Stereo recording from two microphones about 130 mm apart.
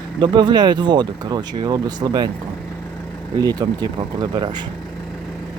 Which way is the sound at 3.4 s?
30° right (ahead or behind).